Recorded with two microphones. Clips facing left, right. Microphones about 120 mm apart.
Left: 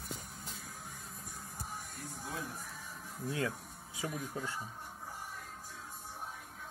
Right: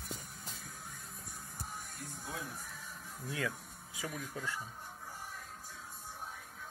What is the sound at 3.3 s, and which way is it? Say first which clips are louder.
Speech: left 2 dB; 30° left (ahead or behind).